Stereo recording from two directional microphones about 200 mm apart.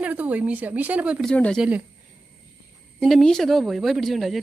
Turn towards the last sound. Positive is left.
turn(degrees=0)  # may be behind; listen again after turning